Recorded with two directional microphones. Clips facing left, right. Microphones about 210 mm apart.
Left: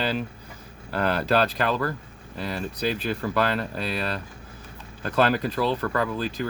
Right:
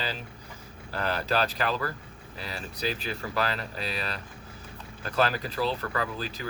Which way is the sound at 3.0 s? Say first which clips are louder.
Left 6 dB; 55° left (ahead or behind).